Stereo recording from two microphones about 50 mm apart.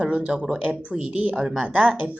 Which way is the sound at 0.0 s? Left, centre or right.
Right.